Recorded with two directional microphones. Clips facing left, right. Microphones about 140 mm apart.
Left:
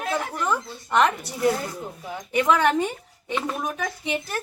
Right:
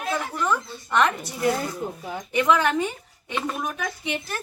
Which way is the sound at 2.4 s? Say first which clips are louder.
Left 1 dB; 35° left (ahead or behind).